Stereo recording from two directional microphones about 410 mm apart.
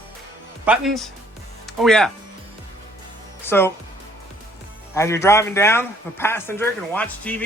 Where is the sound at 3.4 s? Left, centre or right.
Centre.